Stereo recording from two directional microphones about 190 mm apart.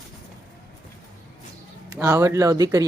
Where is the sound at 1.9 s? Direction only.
15° right (ahead or behind).